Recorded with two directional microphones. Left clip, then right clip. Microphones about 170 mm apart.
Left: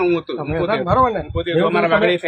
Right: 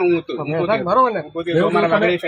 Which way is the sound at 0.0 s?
25° right (ahead or behind).